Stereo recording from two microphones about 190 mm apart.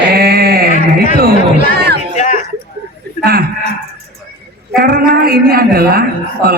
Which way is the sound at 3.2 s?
50° right (ahead or behind).